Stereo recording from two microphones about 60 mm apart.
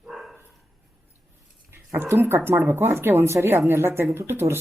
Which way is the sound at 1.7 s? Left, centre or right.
Right.